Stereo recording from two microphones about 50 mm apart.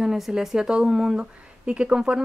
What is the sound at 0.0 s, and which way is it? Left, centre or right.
Speech, centre.